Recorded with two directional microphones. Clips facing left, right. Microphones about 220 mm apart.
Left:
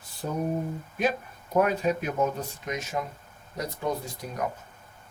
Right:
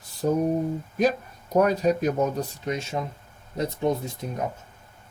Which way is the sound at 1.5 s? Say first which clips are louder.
Right 3 dB; 40° right (ahead or behind).